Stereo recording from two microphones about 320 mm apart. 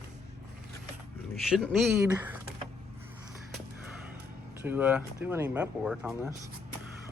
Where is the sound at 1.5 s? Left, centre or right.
Centre.